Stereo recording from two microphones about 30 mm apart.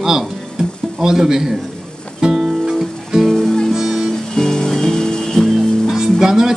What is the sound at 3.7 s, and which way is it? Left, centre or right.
Music, centre.